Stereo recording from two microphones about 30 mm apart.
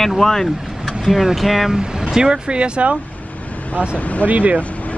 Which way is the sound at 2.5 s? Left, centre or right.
Right.